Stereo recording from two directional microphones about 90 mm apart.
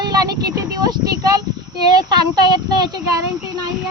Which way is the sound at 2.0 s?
50° right (ahead or behind).